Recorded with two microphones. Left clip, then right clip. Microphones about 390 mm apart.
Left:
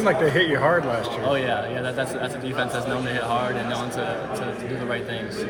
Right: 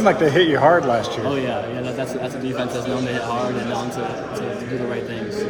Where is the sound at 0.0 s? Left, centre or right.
Right.